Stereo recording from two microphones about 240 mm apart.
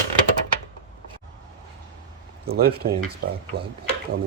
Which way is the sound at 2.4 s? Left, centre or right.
Right.